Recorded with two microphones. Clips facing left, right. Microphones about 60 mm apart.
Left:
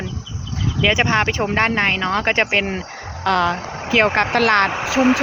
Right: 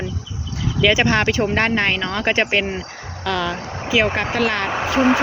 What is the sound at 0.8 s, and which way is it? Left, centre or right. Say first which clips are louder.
Speech: right 1 dB; left.